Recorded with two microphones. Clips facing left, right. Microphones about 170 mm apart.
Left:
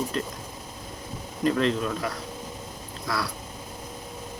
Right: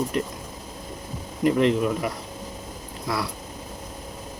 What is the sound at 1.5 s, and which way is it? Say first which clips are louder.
Speech: right 4 dB; 20° right (ahead or behind).